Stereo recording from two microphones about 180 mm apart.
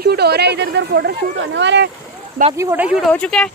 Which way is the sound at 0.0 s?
65° right (ahead or behind).